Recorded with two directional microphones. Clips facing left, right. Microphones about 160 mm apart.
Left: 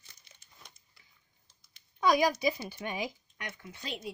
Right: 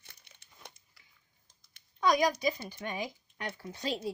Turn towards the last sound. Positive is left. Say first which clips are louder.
# right 6 dB
turn(degrees=-35)  # may be behind; listen again after turning